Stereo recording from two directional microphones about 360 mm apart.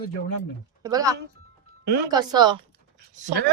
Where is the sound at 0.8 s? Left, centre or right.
Centre.